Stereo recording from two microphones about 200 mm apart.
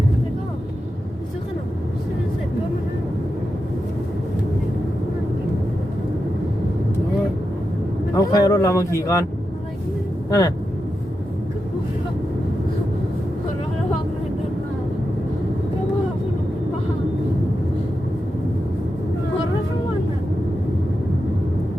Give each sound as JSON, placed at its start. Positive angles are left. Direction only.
{"t": 8.1, "sound": "speech", "side_deg": 20}
{"t": 10.2, "sound": "speech", "side_deg": 15}